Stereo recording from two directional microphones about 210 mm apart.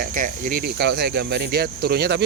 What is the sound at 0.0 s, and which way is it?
Speech, 40° right (ahead or behind).